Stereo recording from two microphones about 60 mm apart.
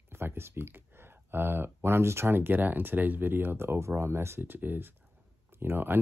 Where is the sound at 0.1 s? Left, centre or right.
Right.